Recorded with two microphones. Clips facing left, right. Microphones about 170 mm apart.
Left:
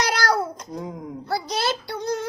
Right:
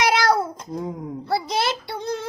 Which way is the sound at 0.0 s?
25° right (ahead or behind).